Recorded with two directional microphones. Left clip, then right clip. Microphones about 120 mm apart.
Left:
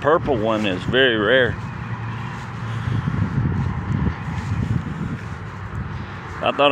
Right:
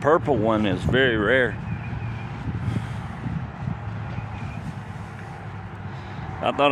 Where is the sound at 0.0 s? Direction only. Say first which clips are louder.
Left 2 dB; 55° right (ahead or behind); by 1.5 s 35° right (ahead or behind).